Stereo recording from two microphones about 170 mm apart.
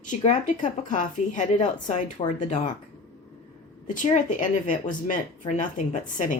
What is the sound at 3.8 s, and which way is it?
A woman's voice, 50° left (ahead or behind).